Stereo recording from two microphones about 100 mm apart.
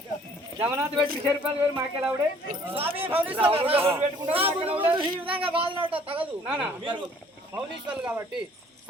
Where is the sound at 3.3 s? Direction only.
65° right (ahead or behind).